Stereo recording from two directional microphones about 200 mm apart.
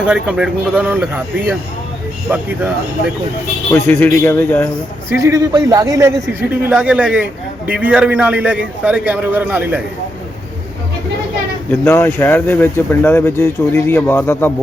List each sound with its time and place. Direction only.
0.0 s a man's voice: 5° right (ahead or behind)
2.3 s a man's voice: 10° right (ahead or behind)
3.7 s speech: 10° left (ahead or behind)
5.0 s a man's voice: 15° right (ahead or behind)
6.7 s a man's voice: 5° right (ahead or behind)
11.7 s speech: 10° left (ahead or behind)